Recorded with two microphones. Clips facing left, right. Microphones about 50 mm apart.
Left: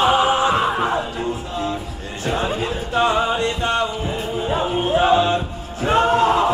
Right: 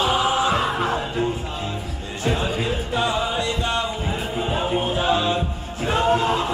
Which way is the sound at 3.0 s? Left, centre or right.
Left.